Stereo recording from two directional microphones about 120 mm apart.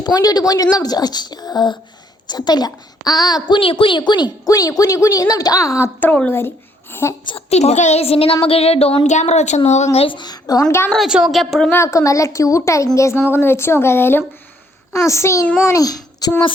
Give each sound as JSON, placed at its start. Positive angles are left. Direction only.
{"t": 0.0, "sound": "a woman's voice", "side_deg": 30}
{"t": 6.0, "sound": "a woman's voice", "side_deg": 15}
{"t": 7.3, "sound": "a woman's voice", "side_deg": 60}
{"t": 10.9, "sound": "a woman's voice", "side_deg": -5}
{"t": 11.7, "sound": "a woman's voice", "side_deg": 25}